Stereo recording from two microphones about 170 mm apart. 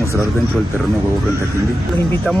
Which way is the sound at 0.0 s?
15° right (ahead or behind).